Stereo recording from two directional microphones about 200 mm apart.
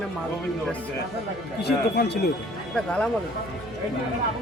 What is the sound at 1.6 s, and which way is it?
Speech, 55° left (ahead or behind).